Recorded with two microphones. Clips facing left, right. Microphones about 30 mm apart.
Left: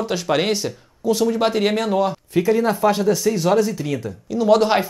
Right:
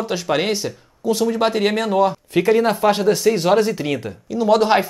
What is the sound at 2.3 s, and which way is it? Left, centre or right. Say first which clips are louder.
Speech: right 2 dB; right.